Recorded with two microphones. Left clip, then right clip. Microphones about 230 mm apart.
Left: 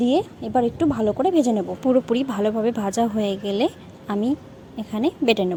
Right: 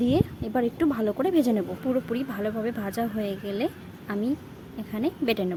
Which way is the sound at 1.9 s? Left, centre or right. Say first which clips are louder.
Left 9 dB; left.